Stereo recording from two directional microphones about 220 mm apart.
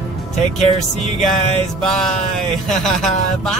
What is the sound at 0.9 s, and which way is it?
Music, 30° left (ahead or behind).